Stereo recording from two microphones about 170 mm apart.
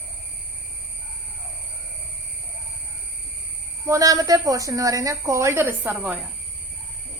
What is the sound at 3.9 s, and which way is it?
A woman's voice, 20° right (ahead or behind).